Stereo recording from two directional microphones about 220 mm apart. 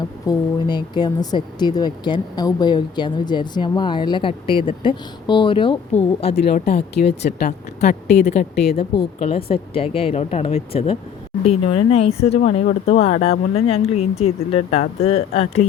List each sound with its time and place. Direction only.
0.3 s speech: 20° left (ahead or behind)
6.3 s speech: 45° left (ahead or behind)
7.8 s speech: 30° left (ahead or behind)
8.5 s speech: 45° left (ahead or behind)
9.1 s speech: 25° left (ahead or behind)
12.6 s speech: 40° left (ahead or behind)
13.1 s speech: 25° left (ahead or behind)